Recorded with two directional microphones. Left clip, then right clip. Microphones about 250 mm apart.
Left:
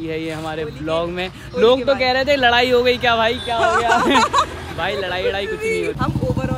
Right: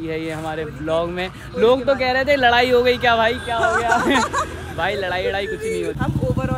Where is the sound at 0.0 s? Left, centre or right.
Centre.